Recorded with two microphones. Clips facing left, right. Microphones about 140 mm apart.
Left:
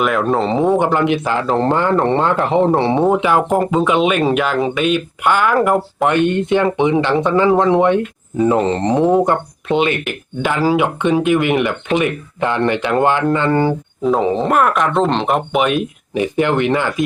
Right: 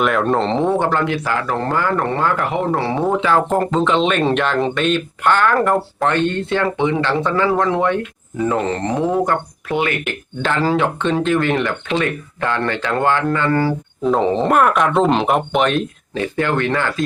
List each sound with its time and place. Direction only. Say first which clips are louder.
0.0 s speech: left 1 dB; centre (ahead or behind); by 10.0 s 20° left (ahead or behind)
10.1 s speech: left 1 dB; 10° left (ahead or behind)
14.0 s speech: left 1 dB; 5° left (ahead or behind)